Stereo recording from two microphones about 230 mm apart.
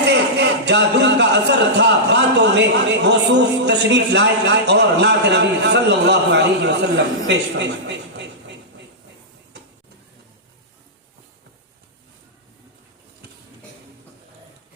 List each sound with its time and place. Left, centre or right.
0.1 s a man's voice: right